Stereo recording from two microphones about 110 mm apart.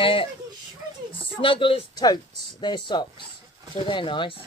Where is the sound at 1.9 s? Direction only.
40° left (ahead or behind).